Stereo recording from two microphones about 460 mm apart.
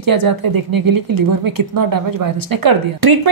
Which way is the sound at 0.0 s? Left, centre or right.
Right.